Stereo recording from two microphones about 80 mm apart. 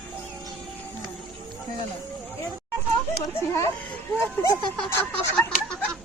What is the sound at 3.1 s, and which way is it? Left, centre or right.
Children playing, left.